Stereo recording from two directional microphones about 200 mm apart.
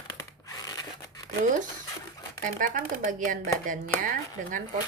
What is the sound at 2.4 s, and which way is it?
Speech, 40° right (ahead or behind).